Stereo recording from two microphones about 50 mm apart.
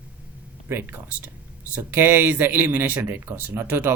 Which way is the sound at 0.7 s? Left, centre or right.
Right.